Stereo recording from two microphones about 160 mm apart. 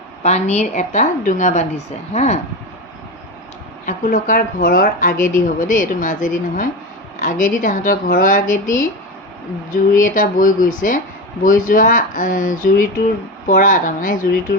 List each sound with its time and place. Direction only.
0.2 s a woman's voice: 45° left (ahead or behind)
3.8 s speech: 55° left (ahead or behind)
9.9 s speech: 55° left (ahead or behind)